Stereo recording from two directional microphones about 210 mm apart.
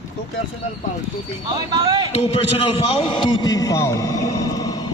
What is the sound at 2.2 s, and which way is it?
A man's voice, 25° left (ahead or behind).